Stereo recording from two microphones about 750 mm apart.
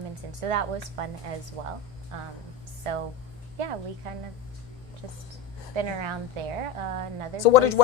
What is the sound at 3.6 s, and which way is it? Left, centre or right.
A woman's voice, right.